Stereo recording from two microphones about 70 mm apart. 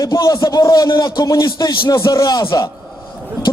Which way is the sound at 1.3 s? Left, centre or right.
Left.